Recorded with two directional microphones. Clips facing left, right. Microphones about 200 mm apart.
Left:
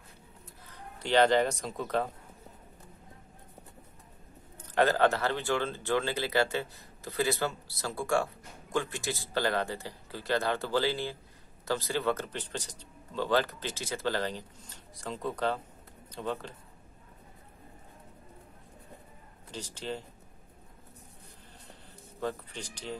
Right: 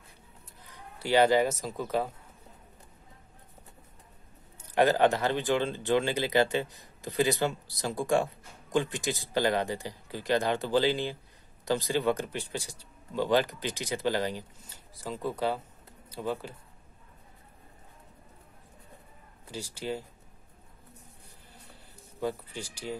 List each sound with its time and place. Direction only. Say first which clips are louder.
0.7 s speech: right 2 dB; 10° right (ahead or behind)
4.7 s speech: right 2 dB; 15° right (ahead or behind)
19.5 s speech: right 3 dB; 10° right (ahead or behind)
22.2 s speech: right 2 dB; 10° right (ahead or behind)